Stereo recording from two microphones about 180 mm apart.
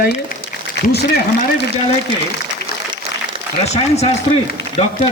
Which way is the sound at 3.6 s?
40° left (ahead or behind).